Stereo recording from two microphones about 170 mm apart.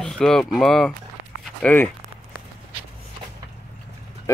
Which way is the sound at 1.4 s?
10° left (ahead or behind).